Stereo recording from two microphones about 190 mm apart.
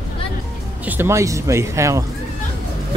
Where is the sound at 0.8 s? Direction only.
10° right (ahead or behind).